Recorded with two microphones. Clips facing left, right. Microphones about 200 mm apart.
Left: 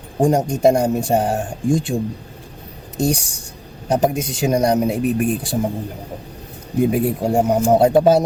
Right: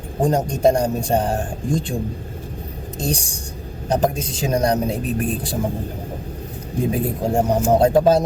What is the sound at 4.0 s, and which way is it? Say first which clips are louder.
Speech: left 3 dB; 10° left (ahead or behind).